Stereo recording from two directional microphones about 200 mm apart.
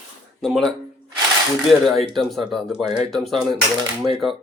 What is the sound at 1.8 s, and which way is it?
Speech, centre (ahead or behind).